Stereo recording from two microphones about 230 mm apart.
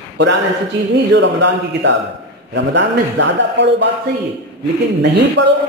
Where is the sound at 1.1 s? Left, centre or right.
Right.